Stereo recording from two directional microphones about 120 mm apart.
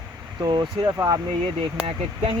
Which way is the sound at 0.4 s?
35° right (ahead or behind).